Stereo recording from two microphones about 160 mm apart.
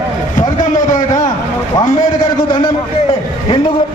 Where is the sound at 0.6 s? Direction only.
55° left (ahead or behind).